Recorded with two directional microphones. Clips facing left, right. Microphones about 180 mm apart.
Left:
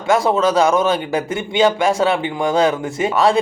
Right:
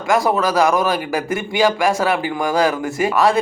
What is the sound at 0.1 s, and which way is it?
A man's voice, 25° left (ahead or behind).